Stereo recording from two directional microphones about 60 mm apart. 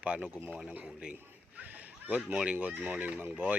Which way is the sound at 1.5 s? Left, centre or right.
Right.